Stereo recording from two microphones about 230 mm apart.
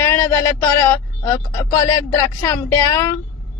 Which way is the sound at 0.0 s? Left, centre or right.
Centre.